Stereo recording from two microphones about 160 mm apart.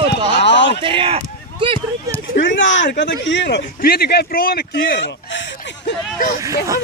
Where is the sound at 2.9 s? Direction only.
90° left.